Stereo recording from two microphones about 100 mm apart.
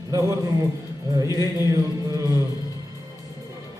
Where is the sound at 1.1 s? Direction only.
40° right (ahead or behind).